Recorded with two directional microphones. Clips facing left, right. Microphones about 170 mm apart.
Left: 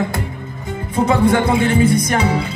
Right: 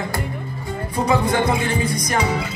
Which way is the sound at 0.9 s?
25° left (ahead or behind).